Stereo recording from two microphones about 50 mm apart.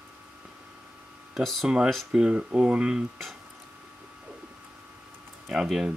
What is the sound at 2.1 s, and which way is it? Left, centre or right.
Speech, centre.